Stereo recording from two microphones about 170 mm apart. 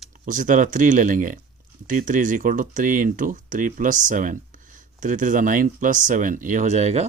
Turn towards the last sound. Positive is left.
turn(degrees=-40)  # may be behind; listen again after turning